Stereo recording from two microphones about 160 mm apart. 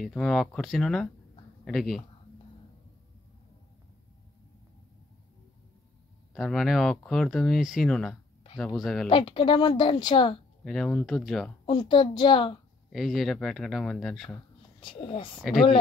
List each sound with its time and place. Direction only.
0.0 s speech: centre (ahead or behind)
6.3 s speech: centre (ahead or behind)
9.1 s speech: 30° left (ahead or behind)
10.6 s speech: centre (ahead or behind)
11.6 s speech: 30° left (ahead or behind)
12.9 s speech: centre (ahead or behind)
14.8 s speech: 30° left (ahead or behind)